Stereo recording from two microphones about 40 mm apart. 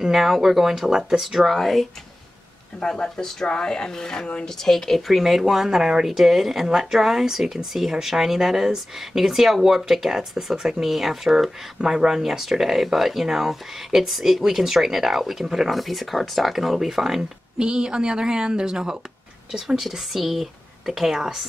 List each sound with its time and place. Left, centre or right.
0.0 s speech: centre
1.4 s a woman's voice: centre
2.8 s a woman's voice: centre
11.8 s speech: centre
17.6 s speech: centre